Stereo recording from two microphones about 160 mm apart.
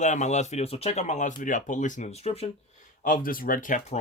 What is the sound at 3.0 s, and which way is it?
Speech, 60° left (ahead or behind).